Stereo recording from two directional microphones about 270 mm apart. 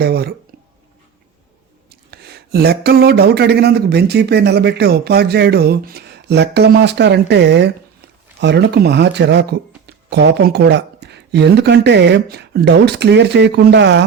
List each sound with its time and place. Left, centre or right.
0.0 s speech: right
2.0 s speech: right